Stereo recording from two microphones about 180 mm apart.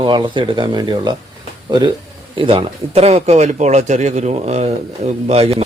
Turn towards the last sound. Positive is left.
turn(degrees=-35)  # may be behind; listen again after turning